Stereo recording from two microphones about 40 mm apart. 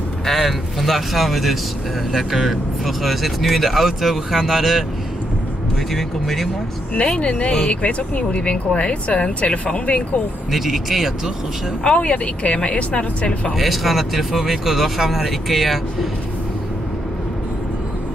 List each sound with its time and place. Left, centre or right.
0.2 s speech: centre
5.9 s speech: centre
7.0 s speech: left
10.5 s speech: centre
11.8 s speech: left
13.6 s speech: centre